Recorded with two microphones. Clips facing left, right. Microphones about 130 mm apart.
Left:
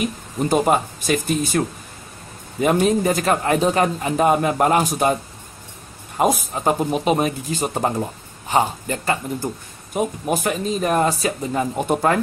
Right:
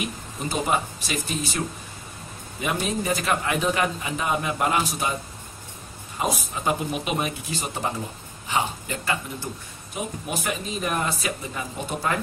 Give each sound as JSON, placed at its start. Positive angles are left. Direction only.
{"t": 0.5, "sound": "a man's voice", "side_deg": 50}
{"t": 2.6, "sound": "a man's voice", "side_deg": 45}
{"t": 6.1, "sound": "a man's voice", "side_deg": 50}